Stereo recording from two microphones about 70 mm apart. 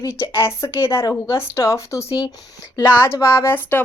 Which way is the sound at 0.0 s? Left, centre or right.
Left.